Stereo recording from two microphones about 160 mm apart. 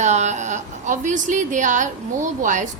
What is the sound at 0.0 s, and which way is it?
A woman's voice, 45° right (ahead or behind).